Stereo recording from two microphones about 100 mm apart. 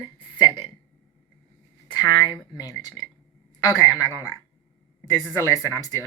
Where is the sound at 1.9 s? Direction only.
45° left (ahead or behind).